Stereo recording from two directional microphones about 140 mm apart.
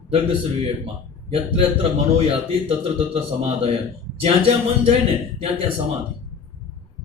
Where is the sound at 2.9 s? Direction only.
45° right (ahead or behind).